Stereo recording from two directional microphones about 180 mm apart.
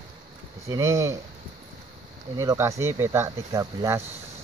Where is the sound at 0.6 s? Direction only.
15° right (ahead or behind).